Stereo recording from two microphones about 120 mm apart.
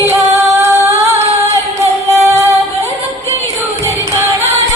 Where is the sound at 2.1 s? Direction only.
25° right (ahead or behind).